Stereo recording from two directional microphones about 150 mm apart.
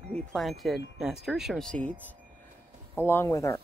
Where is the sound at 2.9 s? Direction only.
15° left (ahead or behind).